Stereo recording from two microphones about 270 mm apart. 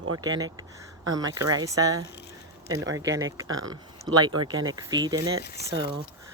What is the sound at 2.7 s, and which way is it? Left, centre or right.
Speech, right.